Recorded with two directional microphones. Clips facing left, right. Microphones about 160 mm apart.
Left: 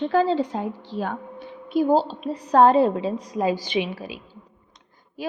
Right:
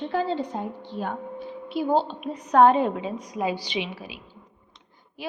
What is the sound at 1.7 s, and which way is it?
A woman's voice, 40° left (ahead or behind).